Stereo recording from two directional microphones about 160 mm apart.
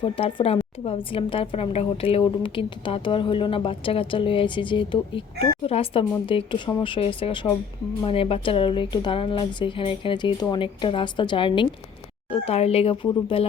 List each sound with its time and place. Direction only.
0.0 s a woman's voice: 35° left (ahead or behind)